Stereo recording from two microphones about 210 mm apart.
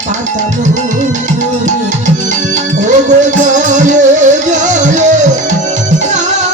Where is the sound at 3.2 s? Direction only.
35° right (ahead or behind).